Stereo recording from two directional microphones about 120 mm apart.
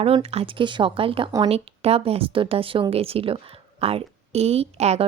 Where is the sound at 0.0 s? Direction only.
55° right (ahead or behind).